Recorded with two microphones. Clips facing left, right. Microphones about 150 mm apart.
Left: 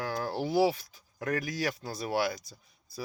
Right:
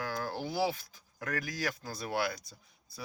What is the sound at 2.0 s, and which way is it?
Speech, 5° left (ahead or behind).